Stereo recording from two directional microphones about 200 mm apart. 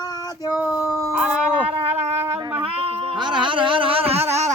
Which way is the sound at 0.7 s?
15° left (ahead or behind).